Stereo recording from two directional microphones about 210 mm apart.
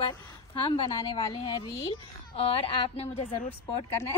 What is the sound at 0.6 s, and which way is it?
Speech, 25° left (ahead or behind).